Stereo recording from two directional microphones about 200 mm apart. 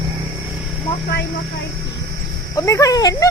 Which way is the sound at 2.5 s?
15° left (ahead or behind).